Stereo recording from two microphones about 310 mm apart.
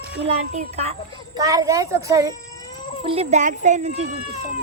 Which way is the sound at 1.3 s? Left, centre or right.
Centre.